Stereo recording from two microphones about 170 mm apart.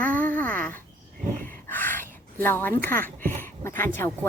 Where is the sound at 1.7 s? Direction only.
10° left (ahead or behind).